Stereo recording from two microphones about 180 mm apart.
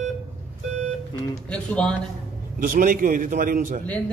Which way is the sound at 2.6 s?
50° right (ahead or behind).